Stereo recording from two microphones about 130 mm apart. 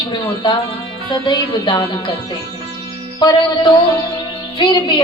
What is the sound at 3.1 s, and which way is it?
A woman's voice, 30° left (ahead or behind).